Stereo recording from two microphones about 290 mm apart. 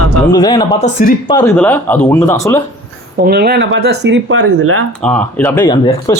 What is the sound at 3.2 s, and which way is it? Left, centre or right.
Speech, right.